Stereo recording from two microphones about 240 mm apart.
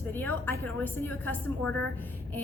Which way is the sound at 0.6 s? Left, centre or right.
Centre.